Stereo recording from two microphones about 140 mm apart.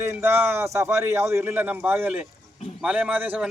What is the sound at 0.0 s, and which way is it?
Speech, 15° right (ahead or behind).